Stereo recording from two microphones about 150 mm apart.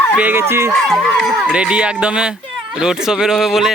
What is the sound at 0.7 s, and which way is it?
Speech, centre (ahead or behind).